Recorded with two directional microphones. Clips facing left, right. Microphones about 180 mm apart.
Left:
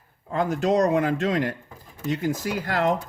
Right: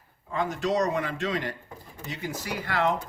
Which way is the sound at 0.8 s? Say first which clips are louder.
Left 6 dB; 50° left (ahead or behind).